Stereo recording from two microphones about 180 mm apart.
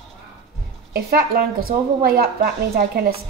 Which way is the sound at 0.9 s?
60° right (ahead or behind).